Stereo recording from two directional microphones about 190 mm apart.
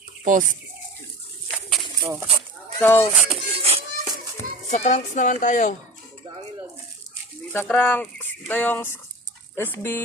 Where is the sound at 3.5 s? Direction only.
30° right (ahead or behind).